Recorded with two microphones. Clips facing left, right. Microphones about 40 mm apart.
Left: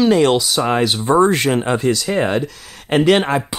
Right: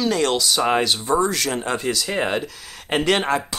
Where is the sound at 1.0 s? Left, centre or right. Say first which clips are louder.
Left 7 dB; left.